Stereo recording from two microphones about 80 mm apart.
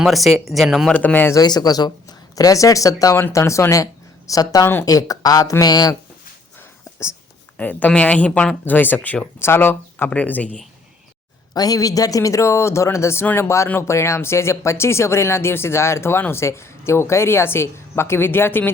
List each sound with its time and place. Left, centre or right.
0.0 s speech: centre
1.0 s speech: left
1.3 s speech: left
4.6 s speech: left
4.9 s speech: left
7.5 s speech: left
8.6 s speech: left
11.5 s speech: left